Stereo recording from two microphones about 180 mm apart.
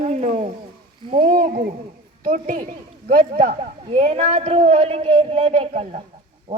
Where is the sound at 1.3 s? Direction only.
50° right (ahead or behind).